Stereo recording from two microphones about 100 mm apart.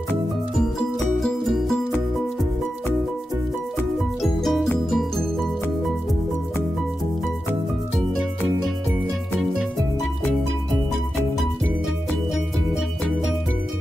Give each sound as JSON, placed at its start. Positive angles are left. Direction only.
{"t": 0.6, "sound": "music", "side_deg": 5}
{"t": 4.2, "sound": "music", "side_deg": 0}